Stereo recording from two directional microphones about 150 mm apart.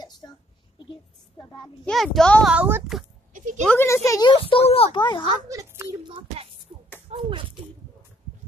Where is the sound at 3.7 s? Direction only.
15° left (ahead or behind).